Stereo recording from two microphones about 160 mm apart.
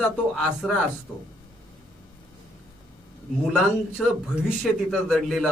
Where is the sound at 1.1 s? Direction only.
10° left (ahead or behind).